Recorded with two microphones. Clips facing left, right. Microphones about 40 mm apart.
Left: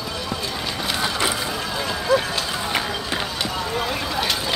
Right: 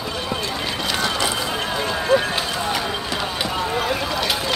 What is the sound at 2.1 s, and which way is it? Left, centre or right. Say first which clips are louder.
Run: right 1 dB; right.